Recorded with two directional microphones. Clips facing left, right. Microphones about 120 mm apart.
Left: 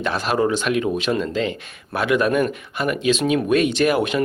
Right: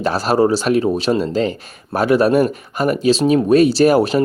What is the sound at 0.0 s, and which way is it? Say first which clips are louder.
Speech: right 5 dB; 40° right (ahead or behind).